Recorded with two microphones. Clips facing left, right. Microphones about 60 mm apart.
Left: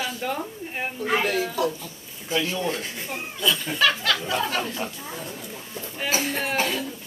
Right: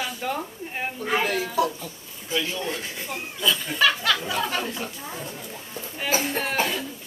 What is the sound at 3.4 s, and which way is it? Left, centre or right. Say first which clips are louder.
A woman's voice: even; centre.